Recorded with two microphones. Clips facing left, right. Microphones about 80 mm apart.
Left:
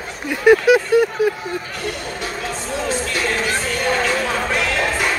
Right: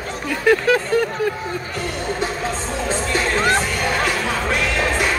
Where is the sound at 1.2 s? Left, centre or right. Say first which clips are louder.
Left 3 dB; centre.